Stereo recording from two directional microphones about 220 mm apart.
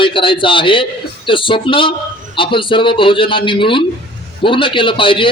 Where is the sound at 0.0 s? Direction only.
25° left (ahead or behind).